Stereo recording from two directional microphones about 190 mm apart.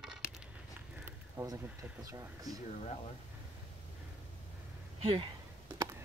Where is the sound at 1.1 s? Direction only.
15° right (ahead or behind).